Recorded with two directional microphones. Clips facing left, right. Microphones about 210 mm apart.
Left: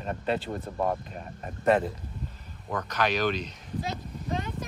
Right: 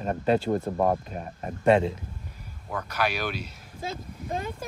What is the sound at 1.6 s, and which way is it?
Speech, 25° right (ahead or behind).